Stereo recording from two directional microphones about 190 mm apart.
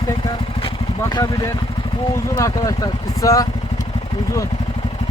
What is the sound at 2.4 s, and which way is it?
Speech, 20° left (ahead or behind).